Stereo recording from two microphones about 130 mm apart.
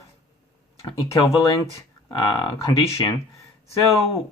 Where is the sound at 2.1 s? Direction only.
40° left (ahead or behind).